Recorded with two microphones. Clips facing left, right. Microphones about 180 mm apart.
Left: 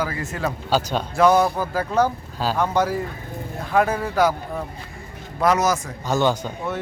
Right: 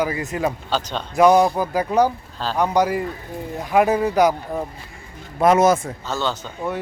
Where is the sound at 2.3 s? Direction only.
10° left (ahead or behind).